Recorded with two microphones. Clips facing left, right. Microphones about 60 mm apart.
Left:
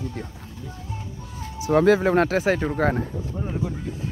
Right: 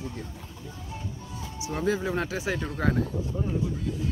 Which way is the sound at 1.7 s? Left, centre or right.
Left.